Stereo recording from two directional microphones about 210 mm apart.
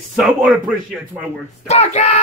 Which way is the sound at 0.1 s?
Centre (ahead or behind).